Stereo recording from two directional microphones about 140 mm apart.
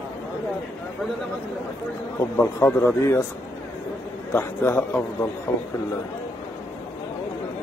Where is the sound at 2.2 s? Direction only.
20° left (ahead or behind).